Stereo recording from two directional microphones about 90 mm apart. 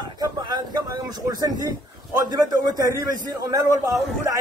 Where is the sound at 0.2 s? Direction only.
50° right (ahead or behind).